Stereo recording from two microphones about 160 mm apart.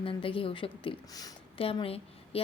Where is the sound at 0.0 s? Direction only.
35° left (ahead or behind).